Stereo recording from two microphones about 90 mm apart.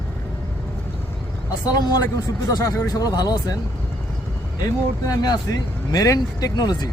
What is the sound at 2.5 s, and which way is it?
Speech, 35° left (ahead or behind).